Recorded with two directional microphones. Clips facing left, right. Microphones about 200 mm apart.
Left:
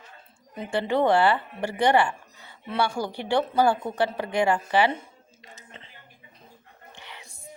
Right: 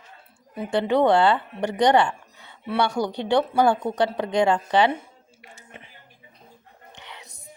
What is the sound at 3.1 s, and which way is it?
Speech, 20° right (ahead or behind).